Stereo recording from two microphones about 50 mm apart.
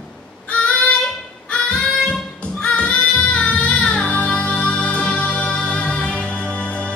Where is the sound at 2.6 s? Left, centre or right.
Left.